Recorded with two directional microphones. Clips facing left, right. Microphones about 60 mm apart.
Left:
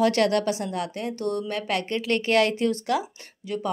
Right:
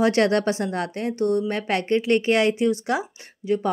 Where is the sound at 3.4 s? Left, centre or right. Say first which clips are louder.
Right 8 dB; right.